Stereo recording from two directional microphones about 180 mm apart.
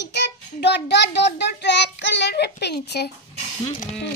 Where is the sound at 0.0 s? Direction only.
75° left (ahead or behind).